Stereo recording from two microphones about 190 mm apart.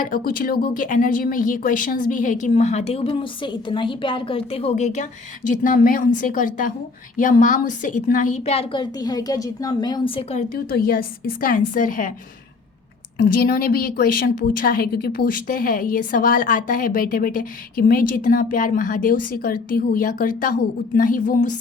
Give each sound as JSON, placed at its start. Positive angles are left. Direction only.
{"t": 0.0, "sound": "a woman's voice", "side_deg": 50}
{"t": 10.5, "sound": "a woman's voice", "side_deg": 50}
{"t": 13.2, "sound": "a woman's voice", "side_deg": 50}